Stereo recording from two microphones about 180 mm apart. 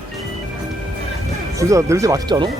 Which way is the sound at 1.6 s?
15° right (ahead or behind).